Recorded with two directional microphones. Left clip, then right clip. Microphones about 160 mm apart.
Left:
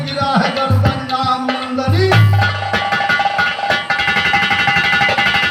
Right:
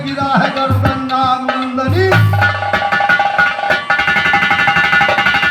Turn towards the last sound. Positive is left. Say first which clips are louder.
# right 2 dB
turn(degrees=-55)  # may be behind; listen again after turning